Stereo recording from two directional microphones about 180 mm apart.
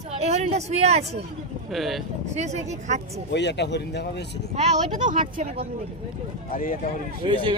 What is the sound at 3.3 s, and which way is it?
Speech, 70° left (ahead or behind).